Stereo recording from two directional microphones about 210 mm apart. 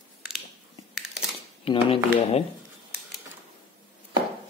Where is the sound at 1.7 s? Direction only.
30° left (ahead or behind).